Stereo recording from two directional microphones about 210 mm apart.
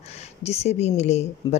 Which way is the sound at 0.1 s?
30° left (ahead or behind).